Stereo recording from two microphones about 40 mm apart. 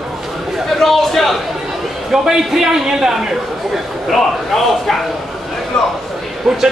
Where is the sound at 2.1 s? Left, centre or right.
Centre.